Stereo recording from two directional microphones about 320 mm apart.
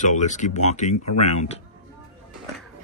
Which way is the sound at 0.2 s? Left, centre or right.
Left.